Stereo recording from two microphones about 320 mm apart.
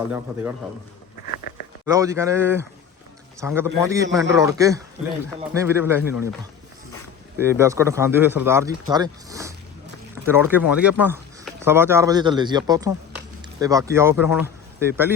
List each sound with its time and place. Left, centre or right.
1.3 s a sound: left
1.9 s speech: centre
7.3 s speech: centre